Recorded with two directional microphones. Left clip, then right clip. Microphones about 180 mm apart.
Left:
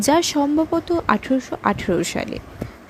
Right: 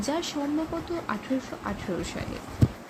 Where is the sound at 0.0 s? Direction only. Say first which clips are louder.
Left 12 dB; 55° left (ahead or behind).